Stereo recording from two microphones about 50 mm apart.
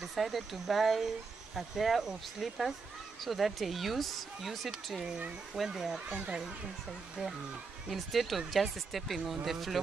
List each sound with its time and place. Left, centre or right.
0.0 s speech: centre
6.0 s speech: centre
7.9 s speech: centre